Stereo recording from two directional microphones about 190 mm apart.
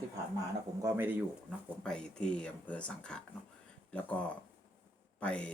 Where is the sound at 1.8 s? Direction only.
5° left (ahead or behind).